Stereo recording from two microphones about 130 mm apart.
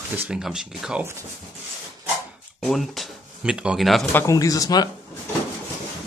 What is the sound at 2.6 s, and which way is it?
Speech, centre (ahead or behind).